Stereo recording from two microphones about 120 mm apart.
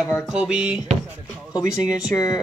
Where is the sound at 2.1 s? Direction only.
25° left (ahead or behind).